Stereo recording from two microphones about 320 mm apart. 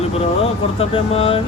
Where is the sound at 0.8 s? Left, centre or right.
Centre.